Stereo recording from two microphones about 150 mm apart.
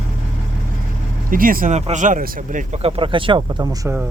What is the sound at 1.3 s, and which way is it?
Speech, 70° right (ahead or behind).